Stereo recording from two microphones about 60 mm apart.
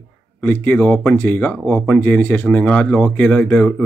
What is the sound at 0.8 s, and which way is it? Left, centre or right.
Speech, left.